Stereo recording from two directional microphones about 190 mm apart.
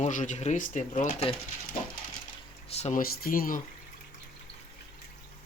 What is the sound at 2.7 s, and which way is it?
Speech, 35° left (ahead or behind).